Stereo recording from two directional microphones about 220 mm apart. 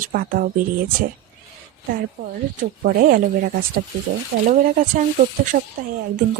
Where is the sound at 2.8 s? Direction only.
40° right (ahead or behind).